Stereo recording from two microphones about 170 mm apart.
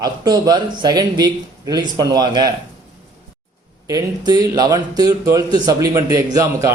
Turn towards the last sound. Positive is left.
turn(degrees=-20)  # may be behind; listen again after turning